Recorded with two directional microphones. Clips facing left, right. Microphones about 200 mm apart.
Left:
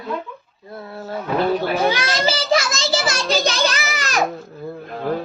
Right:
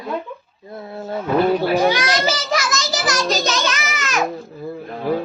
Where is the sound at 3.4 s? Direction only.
35° left (ahead or behind).